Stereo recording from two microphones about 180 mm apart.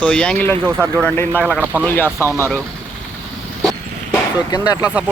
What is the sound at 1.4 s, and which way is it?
Speech, 10° right (ahead or behind).